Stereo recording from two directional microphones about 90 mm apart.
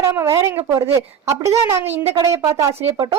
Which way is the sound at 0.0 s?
35° right (ahead or behind).